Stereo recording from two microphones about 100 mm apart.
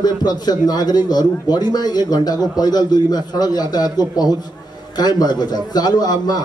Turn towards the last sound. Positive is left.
turn(degrees=45)  # may be behind; listen again after turning